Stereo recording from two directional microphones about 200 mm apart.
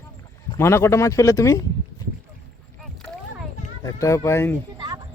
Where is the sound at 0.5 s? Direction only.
15° left (ahead or behind).